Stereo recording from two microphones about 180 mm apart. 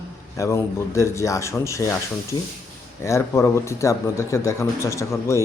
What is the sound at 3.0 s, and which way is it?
A man's voice, 15° left (ahead or behind).